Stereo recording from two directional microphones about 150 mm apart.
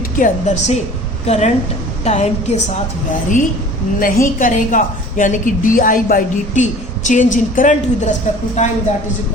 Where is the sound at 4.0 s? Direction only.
70° left (ahead or behind); by 8.7 s 50° left (ahead or behind).